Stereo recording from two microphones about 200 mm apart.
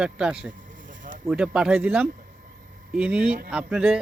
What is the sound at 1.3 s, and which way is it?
A man's voice, 5° right (ahead or behind).